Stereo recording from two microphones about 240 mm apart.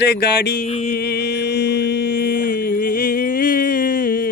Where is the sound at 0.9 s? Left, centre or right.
Left.